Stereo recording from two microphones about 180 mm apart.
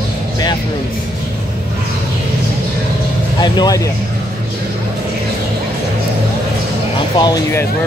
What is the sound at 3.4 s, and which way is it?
Speech, 20° left (ahead or behind).